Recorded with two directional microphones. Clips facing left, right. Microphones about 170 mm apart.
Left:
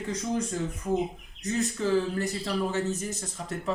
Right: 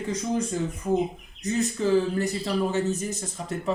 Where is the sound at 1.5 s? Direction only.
15° right (ahead or behind).